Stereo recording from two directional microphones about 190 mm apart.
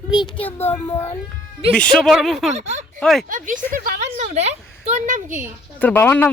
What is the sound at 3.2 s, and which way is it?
A woman's voice, 45° right (ahead or behind).